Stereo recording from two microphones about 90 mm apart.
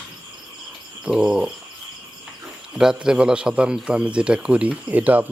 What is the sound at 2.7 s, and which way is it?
A man's voice, 5° right (ahead or behind).